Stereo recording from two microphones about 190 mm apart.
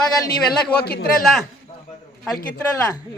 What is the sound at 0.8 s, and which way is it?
Speech, 55° left (ahead or behind).